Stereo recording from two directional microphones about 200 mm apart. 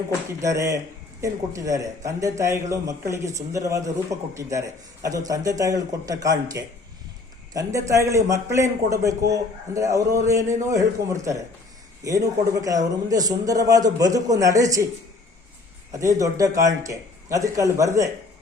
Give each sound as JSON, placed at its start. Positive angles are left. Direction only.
{"t": 0.4, "sound": "a man's voice", "side_deg": -15}
{"t": 15.9, "sound": "a man's voice", "side_deg": -15}